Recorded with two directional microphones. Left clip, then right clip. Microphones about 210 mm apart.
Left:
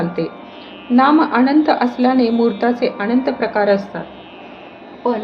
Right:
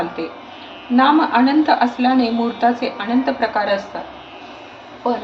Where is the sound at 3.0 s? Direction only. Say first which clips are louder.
Left 1 dB; 50° left (ahead or behind).